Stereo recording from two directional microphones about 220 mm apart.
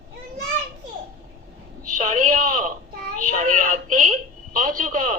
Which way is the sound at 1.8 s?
35° right (ahead or behind).